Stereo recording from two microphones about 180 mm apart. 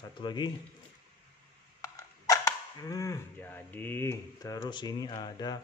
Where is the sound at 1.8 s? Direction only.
15° left (ahead or behind).